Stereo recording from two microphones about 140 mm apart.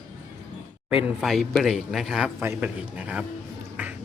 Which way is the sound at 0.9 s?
5° right (ahead or behind).